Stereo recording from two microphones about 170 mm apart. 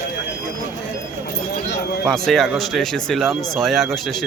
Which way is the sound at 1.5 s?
65° left (ahead or behind).